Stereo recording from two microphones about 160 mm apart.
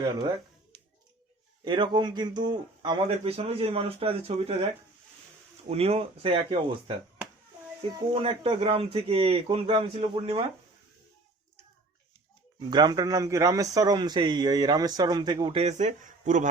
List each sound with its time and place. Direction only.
1.6 s a man's voice: 30° right (ahead or behind)
5.6 s a man's voice: 40° right (ahead or behind)
8.1 s a man's voice: 35° right (ahead or behind)
12.5 s a man's voice: 25° right (ahead or behind)
15.6 s speech: 45° right (ahead or behind)